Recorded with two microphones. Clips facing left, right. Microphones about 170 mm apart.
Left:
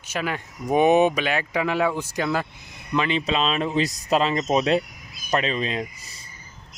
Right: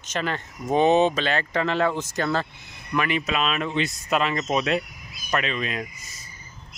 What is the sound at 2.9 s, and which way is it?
Speech, 25° left (ahead or behind).